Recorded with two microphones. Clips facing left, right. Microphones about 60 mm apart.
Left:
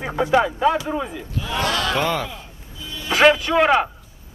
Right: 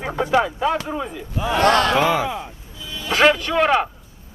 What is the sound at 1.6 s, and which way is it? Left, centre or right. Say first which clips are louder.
Speech: right 7 dB; right.